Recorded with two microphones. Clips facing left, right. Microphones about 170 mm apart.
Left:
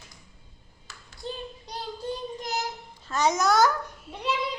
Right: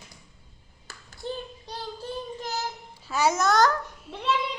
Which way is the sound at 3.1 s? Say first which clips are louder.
Even; 5° right (ahead or behind).